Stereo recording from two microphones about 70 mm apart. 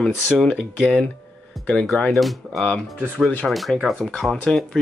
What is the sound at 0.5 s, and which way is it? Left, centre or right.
Speech, centre.